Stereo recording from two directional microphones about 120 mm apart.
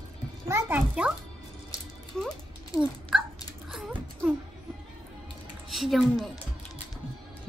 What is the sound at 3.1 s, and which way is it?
Dog, 5° right (ahead or behind).